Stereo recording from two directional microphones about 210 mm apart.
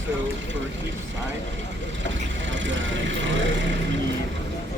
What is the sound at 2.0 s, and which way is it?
Speech, 60° right (ahead or behind).